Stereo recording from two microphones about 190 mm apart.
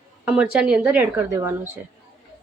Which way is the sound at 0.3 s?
5° right (ahead or behind).